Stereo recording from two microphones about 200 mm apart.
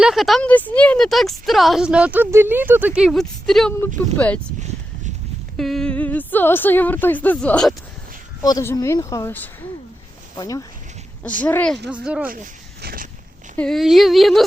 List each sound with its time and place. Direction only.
0.0 s a woman's voice: centre (ahead or behind)
5.5 s a woman's voice: centre (ahead or behind)
8.4 s a woman's voice: 20° left (ahead or behind)
11.9 s speech: 5° right (ahead or behind)
12.3 s speech: 45° right (ahead or behind)
13.6 s speech: centre (ahead or behind)